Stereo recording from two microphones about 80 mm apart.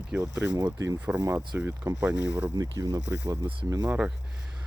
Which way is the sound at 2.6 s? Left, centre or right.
Right.